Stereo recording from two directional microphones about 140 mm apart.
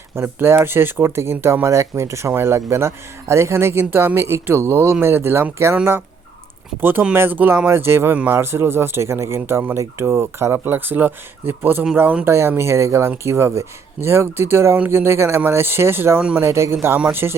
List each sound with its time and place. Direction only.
0.2 s speech: 15° right (ahead or behind)